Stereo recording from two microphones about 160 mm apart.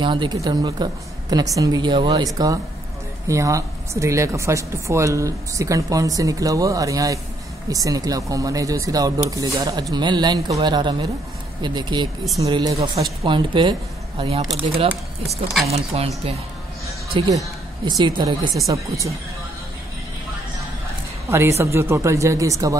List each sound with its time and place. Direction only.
0.0 s a woman's voice: 30° right (ahead or behind)
17.3 s a woman's voice: 20° right (ahead or behind)
21.3 s speech: 15° right (ahead or behind)